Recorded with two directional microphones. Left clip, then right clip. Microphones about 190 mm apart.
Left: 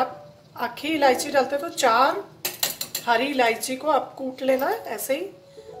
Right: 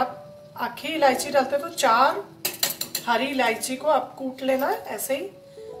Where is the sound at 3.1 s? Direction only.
45° left (ahead or behind).